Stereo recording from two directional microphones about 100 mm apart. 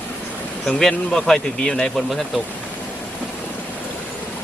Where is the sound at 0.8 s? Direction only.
5° left (ahead or behind).